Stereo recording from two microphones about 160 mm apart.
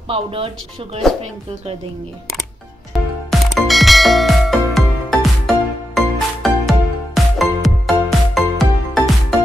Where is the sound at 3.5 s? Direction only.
Centre (ahead or behind).